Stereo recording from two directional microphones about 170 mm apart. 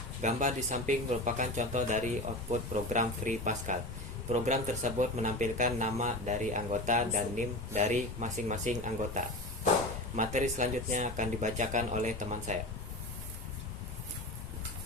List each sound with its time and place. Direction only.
0.2 s speech: 45° right (ahead or behind)